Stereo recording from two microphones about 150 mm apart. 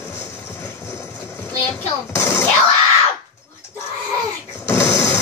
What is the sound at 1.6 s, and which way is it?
Music, 15° left (ahead or behind).